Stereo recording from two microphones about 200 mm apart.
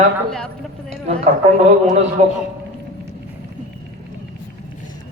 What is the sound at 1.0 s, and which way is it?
A man's voice, 35° right (ahead or behind).